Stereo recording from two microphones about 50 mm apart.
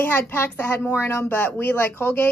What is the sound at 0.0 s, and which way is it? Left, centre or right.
Speech, left.